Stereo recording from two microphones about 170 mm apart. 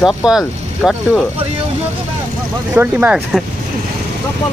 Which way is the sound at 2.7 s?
10° right (ahead or behind).